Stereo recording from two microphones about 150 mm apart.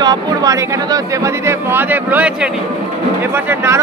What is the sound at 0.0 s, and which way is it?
Speech, 25° right (ahead or behind).